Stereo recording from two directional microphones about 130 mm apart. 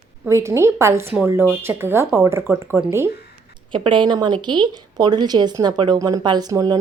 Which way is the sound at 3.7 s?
40° right (ahead or behind).